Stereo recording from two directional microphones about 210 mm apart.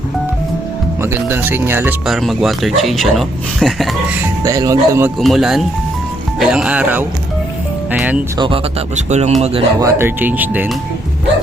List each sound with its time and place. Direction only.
1.0 s speech: 10° right (ahead or behind)
2.0 s speech: centre (ahead or behind)
4.2 s speech: 15° right (ahead or behind)
5.2 s speech: centre (ahead or behind)
8.4 s speech: 25° right (ahead or behind)
9.8 s speech: 10° right (ahead or behind)